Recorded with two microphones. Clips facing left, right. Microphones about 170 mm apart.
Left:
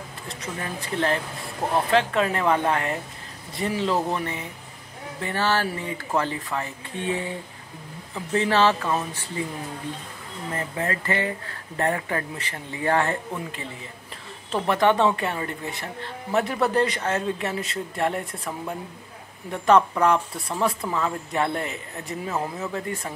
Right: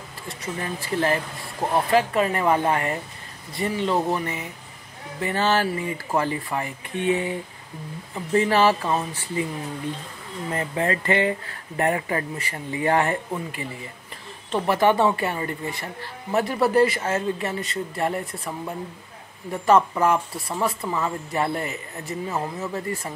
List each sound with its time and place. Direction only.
0.3 s speech: 5° right (ahead or behind)
5.3 s speech: 15° right (ahead or behind)
8.4 s speech: 10° right (ahead or behind)
10.8 s speech: 20° right (ahead or behind); by 23.1 s 5° right (ahead or behind)